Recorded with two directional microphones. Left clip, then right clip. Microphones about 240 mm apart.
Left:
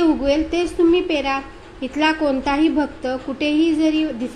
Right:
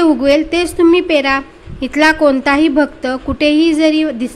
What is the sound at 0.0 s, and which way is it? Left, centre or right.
A woman's voice, right.